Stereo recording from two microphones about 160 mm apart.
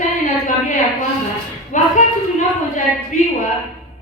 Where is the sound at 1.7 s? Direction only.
50° left (ahead or behind).